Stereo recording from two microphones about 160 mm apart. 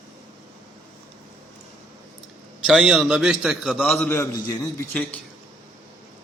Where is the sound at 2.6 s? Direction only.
5° right (ahead or behind); by 5.0 s 15° left (ahead or behind).